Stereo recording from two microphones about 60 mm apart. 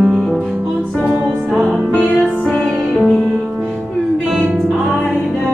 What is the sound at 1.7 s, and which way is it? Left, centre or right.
Music, centre.